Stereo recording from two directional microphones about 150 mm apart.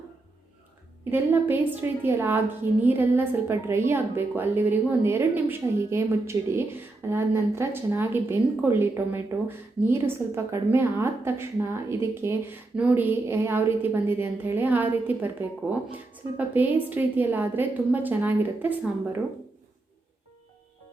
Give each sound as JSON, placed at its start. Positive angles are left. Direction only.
{"t": 1.1, "sound": "a woman's voice", "side_deg": -15}